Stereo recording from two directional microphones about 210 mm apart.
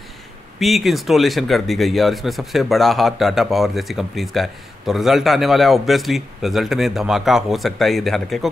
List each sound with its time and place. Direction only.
0.6 s speech: centre (ahead or behind)